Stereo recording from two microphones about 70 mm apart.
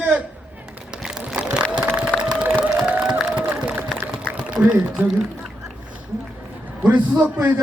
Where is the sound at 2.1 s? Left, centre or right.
Centre.